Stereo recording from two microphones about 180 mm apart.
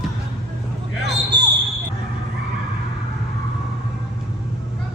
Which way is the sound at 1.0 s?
70° right (ahead or behind).